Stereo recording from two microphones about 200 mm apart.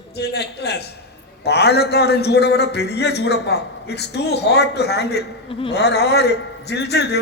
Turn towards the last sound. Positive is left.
turn(degrees=55)  # may be behind; listen again after turning